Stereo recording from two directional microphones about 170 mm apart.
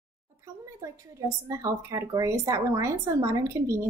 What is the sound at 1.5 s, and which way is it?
A woman's voice, 20° right (ahead or behind).